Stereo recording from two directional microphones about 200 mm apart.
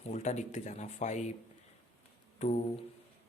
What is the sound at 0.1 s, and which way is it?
Speech, 35° left (ahead or behind).